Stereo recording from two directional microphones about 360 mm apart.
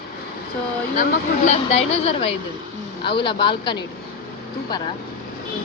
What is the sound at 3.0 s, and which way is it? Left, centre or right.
Speech, centre.